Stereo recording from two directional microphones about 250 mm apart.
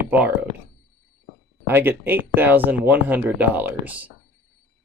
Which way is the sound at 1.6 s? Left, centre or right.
Centre.